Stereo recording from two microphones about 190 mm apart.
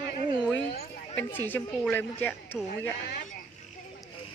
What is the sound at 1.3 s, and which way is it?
Speech, 10° left (ahead or behind).